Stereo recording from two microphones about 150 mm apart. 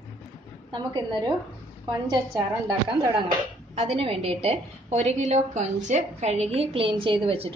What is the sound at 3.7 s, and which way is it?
A woman's voice, 45° right (ahead or behind).